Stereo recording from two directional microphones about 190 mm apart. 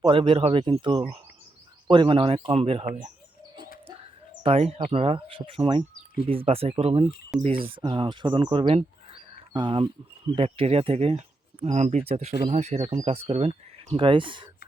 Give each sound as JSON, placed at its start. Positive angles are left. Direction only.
{"t": 0.0, "sound": "speech", "side_deg": -25}
{"t": 4.4, "sound": "speech", "side_deg": -35}